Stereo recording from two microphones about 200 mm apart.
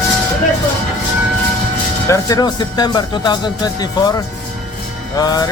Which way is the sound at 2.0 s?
15° left (ahead or behind).